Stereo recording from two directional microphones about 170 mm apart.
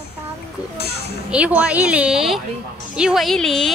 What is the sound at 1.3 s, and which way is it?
Speech, 5° right (ahead or behind).